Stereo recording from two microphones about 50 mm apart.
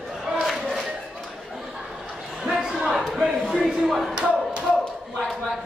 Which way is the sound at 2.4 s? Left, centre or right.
Centre.